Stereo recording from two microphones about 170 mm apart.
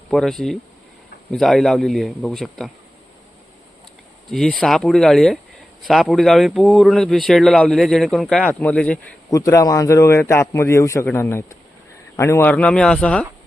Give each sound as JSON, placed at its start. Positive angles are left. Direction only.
{"t": 0.1, "sound": "speech", "side_deg": 0}
{"t": 4.3, "sound": "a man's voice", "side_deg": 0}
{"t": 9.3, "sound": "a man's voice", "side_deg": 20}